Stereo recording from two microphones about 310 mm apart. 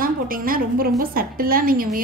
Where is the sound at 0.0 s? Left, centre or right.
Right.